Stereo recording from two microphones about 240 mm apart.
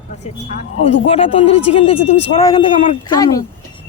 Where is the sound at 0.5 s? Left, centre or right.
Left.